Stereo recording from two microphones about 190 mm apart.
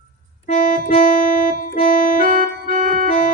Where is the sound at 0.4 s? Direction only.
35° left (ahead or behind).